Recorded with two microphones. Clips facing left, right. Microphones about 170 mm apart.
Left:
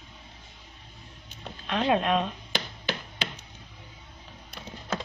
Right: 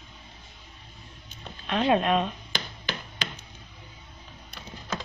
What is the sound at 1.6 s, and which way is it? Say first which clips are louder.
Speech: right 2 dB; centre (ahead or behind).